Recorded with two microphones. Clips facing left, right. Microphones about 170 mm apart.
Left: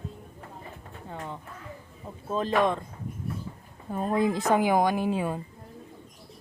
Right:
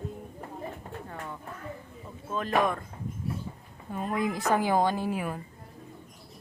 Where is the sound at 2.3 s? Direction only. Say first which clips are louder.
Left 2 dB; 30° left (ahead or behind).